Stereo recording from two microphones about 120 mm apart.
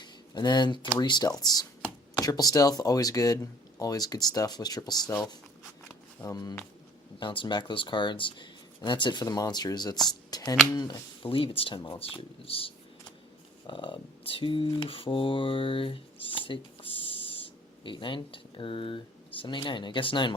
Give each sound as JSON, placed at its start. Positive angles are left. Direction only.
{"t": 0.0, "sound": "a sound", "side_deg": 35}
{"t": 0.9, "sound": "speech", "side_deg": 35}
{"t": 7.2, "sound": "speech", "side_deg": 45}